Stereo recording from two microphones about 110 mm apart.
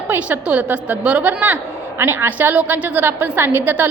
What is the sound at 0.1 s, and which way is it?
A woman's voice, 10° right (ahead or behind).